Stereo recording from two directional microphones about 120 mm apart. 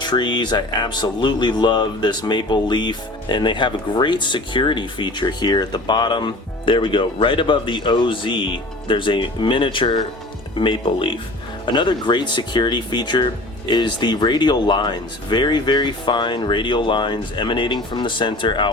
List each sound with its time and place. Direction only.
0.0 s speech: 40° left (ahead or behind)